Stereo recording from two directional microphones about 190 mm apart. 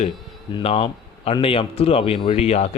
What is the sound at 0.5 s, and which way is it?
A man's voice, 30° left (ahead or behind).